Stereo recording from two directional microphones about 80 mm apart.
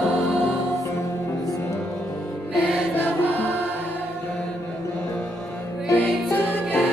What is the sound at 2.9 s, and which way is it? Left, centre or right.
Music, left.